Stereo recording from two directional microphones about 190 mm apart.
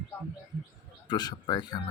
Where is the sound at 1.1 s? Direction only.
20° left (ahead or behind).